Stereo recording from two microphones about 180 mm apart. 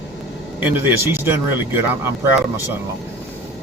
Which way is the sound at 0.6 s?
10° right (ahead or behind).